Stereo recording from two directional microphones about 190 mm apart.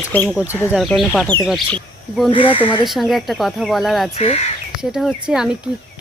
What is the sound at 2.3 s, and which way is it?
Speech, 30° left (ahead or behind).